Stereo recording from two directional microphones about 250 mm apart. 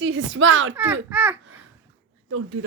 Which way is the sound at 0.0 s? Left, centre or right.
Right.